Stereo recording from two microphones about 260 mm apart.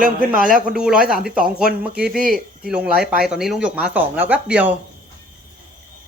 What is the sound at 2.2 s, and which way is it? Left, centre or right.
Speech, right.